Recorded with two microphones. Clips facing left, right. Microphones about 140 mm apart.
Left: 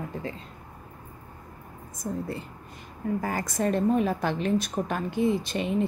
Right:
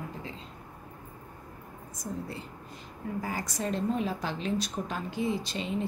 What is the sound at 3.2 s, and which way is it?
A woman's voice, 55° left (ahead or behind).